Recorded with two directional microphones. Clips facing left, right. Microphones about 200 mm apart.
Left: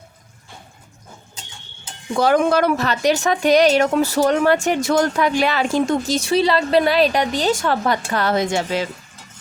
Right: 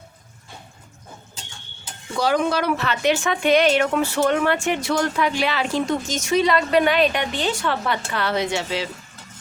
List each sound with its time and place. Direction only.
2.1 s a woman's voice: 50° left (ahead or behind)
6.1 s a woman's voice: 35° left (ahead or behind)